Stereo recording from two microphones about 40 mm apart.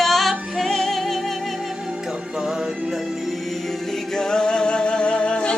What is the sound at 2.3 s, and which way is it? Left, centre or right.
Music, centre.